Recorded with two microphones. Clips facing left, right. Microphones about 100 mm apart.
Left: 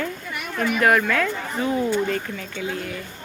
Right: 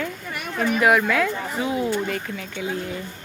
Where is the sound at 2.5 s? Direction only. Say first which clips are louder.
Right 1 dB; 20° right (ahead or behind).